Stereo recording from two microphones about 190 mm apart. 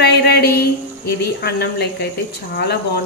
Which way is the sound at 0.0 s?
60° left (ahead or behind).